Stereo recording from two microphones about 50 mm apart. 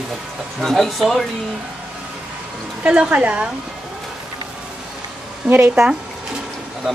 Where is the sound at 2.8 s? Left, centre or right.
Right.